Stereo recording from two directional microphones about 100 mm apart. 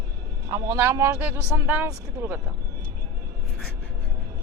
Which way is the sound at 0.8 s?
25° right (ahead or behind).